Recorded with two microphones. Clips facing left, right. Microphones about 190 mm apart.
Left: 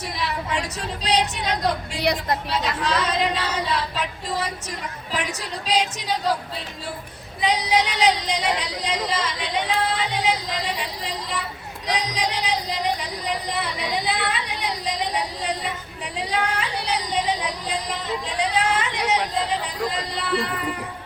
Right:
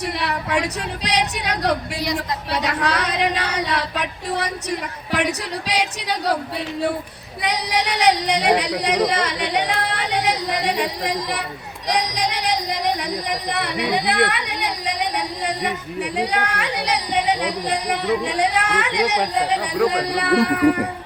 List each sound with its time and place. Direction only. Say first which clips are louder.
0.2 s speech: right 2 dB; 65° right (ahead or behind)
7.4 s speech: left 1 dB; 65° right (ahead or behind)
11.9 s a sound: right 3 dB; 65° right (ahead or behind)
16.1 s speech: right 1 dB; 65° right (ahead or behind)